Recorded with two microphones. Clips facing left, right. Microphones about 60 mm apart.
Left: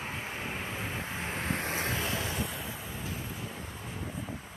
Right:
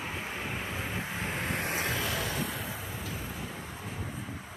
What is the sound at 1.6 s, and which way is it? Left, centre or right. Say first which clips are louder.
Vehicle: right 1 dB; right.